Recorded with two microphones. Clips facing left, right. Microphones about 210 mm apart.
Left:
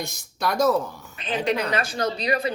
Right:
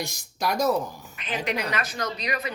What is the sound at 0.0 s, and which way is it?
Speech, 10° right (ahead or behind).